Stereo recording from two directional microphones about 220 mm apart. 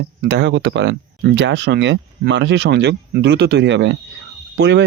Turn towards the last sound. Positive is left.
turn(degrees=-55)  # may be behind; listen again after turning